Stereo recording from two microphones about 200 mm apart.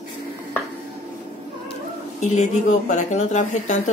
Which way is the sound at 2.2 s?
35° left (ahead or behind).